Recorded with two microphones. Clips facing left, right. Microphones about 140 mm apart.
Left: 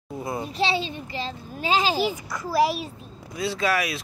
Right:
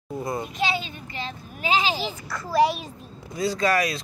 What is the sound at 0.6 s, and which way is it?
A child's voice, 30° left (ahead or behind).